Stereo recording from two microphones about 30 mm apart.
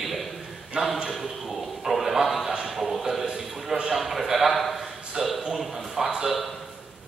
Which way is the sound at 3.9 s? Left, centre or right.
Centre.